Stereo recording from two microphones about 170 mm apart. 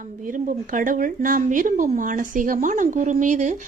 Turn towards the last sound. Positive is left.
turn(degrees=-45)  # may be behind; listen again after turning